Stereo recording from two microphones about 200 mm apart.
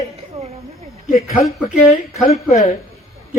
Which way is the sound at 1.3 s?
30° left (ahead or behind).